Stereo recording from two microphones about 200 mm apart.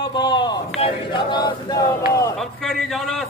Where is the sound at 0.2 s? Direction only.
20° left (ahead or behind).